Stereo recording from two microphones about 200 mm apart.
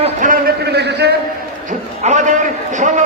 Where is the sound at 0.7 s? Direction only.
55° right (ahead or behind).